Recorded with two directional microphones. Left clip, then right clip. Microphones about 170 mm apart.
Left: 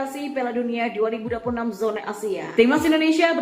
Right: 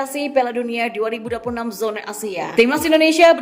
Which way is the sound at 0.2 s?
35° right (ahead or behind).